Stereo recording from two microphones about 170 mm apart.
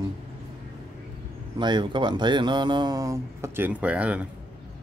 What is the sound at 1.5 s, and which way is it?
Speech, 25° right (ahead or behind).